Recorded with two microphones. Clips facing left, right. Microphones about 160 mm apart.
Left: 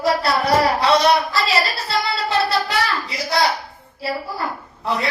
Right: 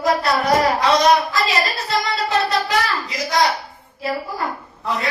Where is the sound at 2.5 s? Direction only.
30° left (ahead or behind).